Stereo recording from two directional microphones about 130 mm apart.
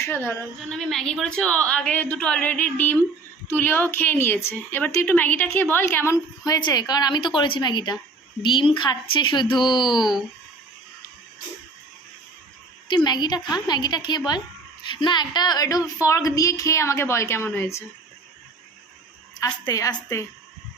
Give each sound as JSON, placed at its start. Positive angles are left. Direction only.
{"t": 0.0, "sound": "speech", "side_deg": 20}
{"t": 0.7, "sound": "a woman's voice", "side_deg": 0}
{"t": 6.4, "sound": "speech", "side_deg": 30}
{"t": 10.0, "sound": "speech", "side_deg": 0}
{"t": 13.1, "sound": "speech", "side_deg": 35}
{"t": 19.6, "sound": "speech", "side_deg": 25}